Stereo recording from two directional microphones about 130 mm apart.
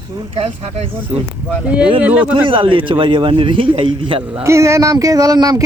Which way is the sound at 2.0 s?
10° right (ahead or behind).